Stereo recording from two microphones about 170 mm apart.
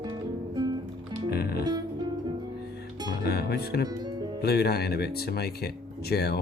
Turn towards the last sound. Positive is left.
turn(degrees=70)  # may be behind; listen again after turning